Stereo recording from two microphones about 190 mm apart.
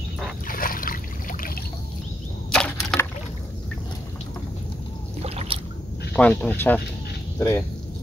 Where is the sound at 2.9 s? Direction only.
5° left (ahead or behind).